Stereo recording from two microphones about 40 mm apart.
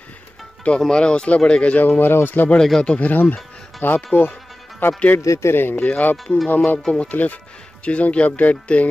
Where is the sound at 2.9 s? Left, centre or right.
Left.